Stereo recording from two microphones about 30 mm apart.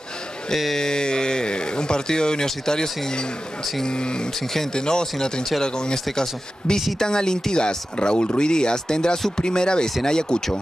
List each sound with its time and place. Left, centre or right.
0.7 s a sound: left
2.4 s speech: centre
7.0 s speech: left